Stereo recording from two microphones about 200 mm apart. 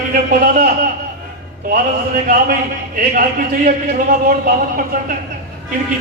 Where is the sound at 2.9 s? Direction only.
45° right (ahead or behind).